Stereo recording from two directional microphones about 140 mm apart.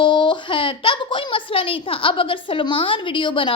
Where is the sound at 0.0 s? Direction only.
35° left (ahead or behind).